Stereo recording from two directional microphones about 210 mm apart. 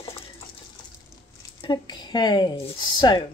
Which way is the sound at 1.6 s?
20° left (ahead or behind).